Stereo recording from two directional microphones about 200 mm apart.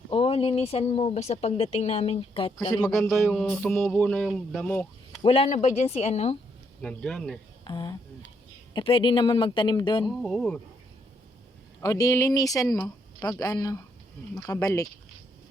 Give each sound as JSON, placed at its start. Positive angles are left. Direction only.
{"t": 0.1, "sound": "speech", "side_deg": 25}
{"t": 2.8, "sound": "speech", "side_deg": 5}
{"t": 5.2, "sound": "speech", "side_deg": 30}
{"t": 6.8, "sound": "speech", "side_deg": 5}
{"t": 7.6, "sound": "speech", "side_deg": 20}
{"t": 10.1, "sound": "speech", "side_deg": 0}
{"t": 11.8, "sound": "speech", "side_deg": 15}